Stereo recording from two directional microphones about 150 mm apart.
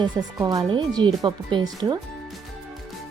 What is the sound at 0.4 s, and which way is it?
Speech, 30° right (ahead or behind).